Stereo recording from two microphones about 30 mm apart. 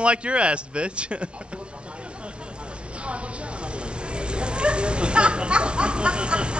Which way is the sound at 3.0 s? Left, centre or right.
Right.